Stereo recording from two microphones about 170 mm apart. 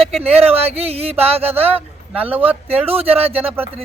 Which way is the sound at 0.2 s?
35° right (ahead or behind).